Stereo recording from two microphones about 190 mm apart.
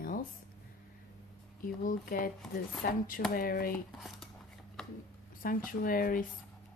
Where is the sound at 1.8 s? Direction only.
45° left (ahead or behind).